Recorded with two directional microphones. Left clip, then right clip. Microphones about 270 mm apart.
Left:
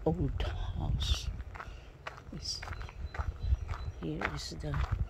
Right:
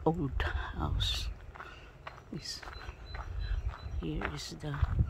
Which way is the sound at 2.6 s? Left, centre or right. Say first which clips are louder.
Left 1 dB; left.